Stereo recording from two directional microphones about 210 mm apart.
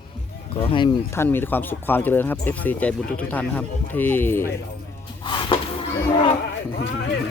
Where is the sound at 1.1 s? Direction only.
10° left (ahead or behind).